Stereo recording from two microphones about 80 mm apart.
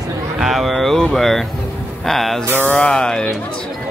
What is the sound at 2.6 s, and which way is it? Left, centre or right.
Music, centre.